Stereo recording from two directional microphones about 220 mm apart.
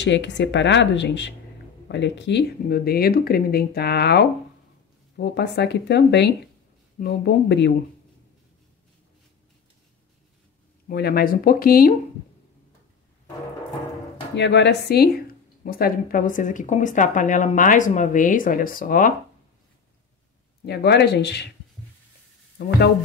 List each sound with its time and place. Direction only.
0.0 s speech: 55° left (ahead or behind)
10.9 s speech: 45° left (ahead or behind)
14.3 s speech: 50° left (ahead or behind)
20.6 s speech: 50° left (ahead or behind)
22.6 s speech: 50° left (ahead or behind)